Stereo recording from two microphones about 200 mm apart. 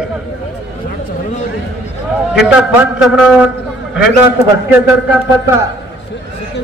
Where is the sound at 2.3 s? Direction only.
5° right (ahead or behind).